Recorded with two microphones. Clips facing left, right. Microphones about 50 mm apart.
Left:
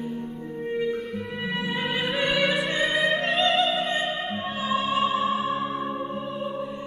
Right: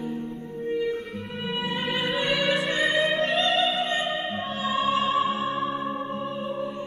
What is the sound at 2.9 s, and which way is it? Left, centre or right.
Opera, centre.